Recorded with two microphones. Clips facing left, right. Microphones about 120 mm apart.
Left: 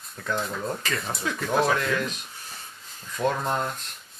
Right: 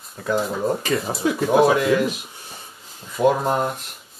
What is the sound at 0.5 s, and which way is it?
Speech, 25° right (ahead or behind).